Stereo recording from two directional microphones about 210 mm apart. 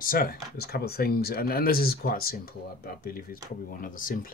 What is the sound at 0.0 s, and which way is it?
Speech, 45° left (ahead or behind).